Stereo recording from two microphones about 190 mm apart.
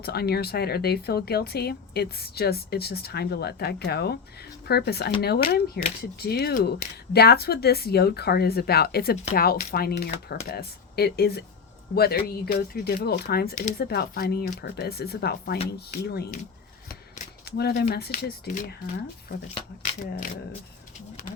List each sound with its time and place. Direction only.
0.0 s speech: 55° left (ahead or behind)